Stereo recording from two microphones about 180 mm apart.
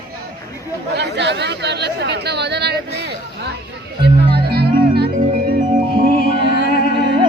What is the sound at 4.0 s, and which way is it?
Music, 65° right (ahead or behind).